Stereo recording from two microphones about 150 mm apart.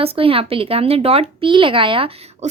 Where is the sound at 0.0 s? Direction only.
40° right (ahead or behind).